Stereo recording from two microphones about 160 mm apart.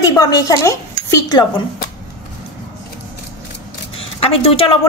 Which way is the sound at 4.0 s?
35° left (ahead or behind).